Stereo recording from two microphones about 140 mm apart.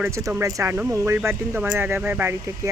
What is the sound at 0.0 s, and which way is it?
Speech, 20° right (ahead or behind).